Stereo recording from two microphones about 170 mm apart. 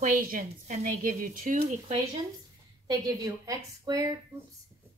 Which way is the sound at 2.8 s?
20° right (ahead or behind).